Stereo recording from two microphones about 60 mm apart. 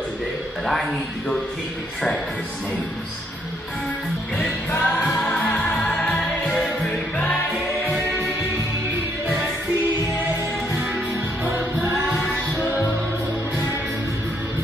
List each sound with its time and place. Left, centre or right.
0.7 s a man's voice: centre
4.6 s music: left
5.9 s music: centre